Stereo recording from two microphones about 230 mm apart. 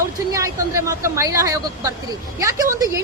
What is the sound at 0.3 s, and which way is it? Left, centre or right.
A woman's voice, centre.